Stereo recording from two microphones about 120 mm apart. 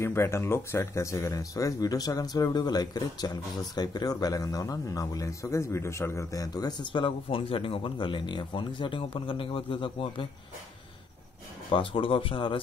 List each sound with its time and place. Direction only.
0.0 s speech: 20° left (ahead or behind); by 10.2 s 45° left (ahead or behind)
11.7 s speech: 45° left (ahead or behind)